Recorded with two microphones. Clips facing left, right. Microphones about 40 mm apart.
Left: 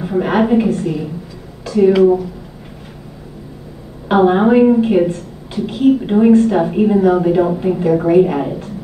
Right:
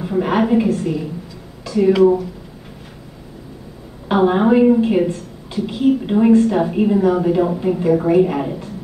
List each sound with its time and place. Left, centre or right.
0.0 s a woman's voice: centre
4.1 s a woman's voice: centre